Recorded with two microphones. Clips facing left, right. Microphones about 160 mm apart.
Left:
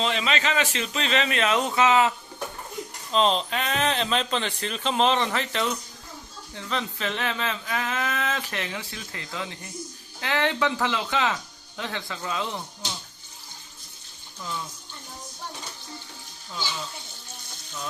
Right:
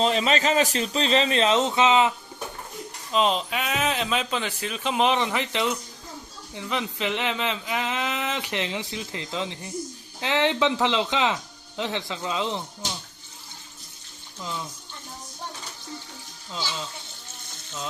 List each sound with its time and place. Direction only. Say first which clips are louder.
0.0 s speech: right 4 dB; 40° right (ahead or behind); by 2.1 s 20° right (ahead or behind)
3.1 s speech: even; 10° right (ahead or behind)
16.5 s a sound: right 1 dB; 20° right (ahead or behind)